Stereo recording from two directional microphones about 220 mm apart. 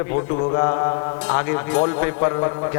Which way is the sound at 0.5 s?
25° left (ahead or behind).